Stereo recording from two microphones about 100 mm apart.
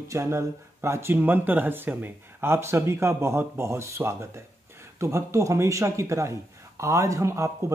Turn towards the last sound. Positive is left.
turn(degrees=-30)  # may be behind; listen again after turning